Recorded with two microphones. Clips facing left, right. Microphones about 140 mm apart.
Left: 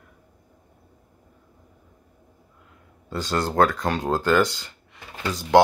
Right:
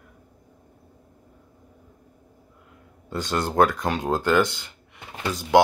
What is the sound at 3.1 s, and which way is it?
Speech, 15° right (ahead or behind).